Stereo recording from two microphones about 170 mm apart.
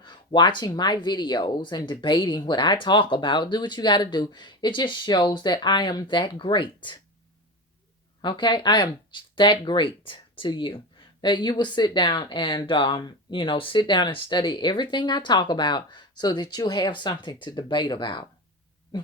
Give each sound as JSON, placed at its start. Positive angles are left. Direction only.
{"t": 0.0, "sound": "speech", "side_deg": 25}
{"t": 8.2, "sound": "speech", "side_deg": 30}
{"t": 18.9, "sound": "a sound", "side_deg": 25}